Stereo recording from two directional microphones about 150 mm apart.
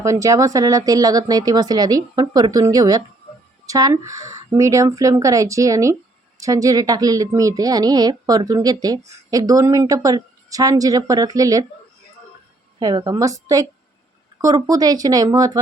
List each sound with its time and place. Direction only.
0.0 s speech: 20° right (ahead or behind)
12.8 s speech: 30° right (ahead or behind)